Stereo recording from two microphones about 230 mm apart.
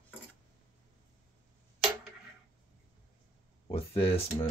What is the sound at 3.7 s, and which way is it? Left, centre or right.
Speech, left.